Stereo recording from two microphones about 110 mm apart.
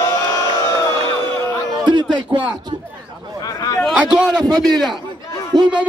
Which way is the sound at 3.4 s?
35° left (ahead or behind).